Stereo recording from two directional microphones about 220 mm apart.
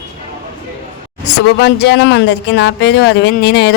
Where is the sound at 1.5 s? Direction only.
50° left (ahead or behind).